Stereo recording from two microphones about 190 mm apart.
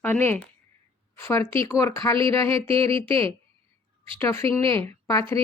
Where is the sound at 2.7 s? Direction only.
30° right (ahead or behind).